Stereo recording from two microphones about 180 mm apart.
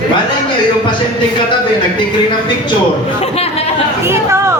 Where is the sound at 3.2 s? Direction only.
35° left (ahead or behind).